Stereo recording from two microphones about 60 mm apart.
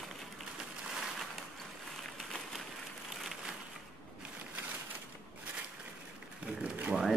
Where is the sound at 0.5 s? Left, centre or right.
Centre.